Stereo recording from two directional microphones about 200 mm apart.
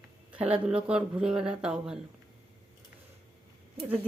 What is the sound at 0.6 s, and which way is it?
Speech, 5° right (ahead or behind).